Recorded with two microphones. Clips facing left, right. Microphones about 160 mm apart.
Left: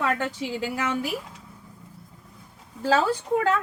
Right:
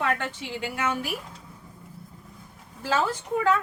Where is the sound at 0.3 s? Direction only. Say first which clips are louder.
Left 3 dB; 35° left (ahead or behind).